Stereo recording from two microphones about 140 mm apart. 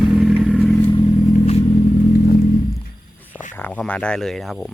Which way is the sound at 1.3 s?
55° left (ahead or behind).